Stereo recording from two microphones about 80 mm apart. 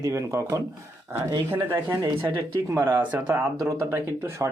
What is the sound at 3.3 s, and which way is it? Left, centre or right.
Speech, right.